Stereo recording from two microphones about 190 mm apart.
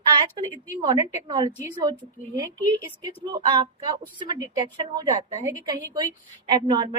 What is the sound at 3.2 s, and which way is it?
A woman's voice, 25° right (ahead or behind).